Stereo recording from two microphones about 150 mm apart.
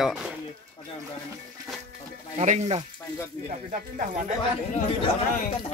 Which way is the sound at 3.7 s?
65° right (ahead or behind).